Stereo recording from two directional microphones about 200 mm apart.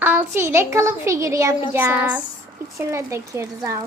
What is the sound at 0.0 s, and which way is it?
Speech, 10° right (ahead or behind).